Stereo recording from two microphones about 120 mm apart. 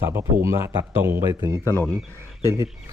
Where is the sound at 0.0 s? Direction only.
20° right (ahead or behind).